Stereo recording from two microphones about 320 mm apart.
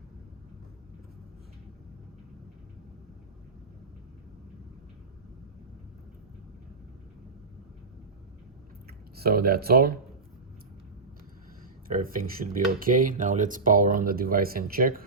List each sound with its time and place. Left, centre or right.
9.1 s speech: right
11.9 s speech: right